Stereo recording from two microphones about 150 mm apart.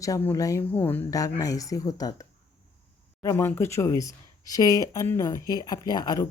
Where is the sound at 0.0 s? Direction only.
20° left (ahead or behind).